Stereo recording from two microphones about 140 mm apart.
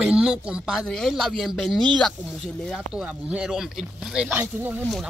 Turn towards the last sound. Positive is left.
turn(degrees=-15)  # may be behind; listen again after turning